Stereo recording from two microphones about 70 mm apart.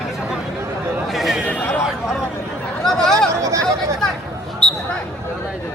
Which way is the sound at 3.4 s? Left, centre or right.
Right.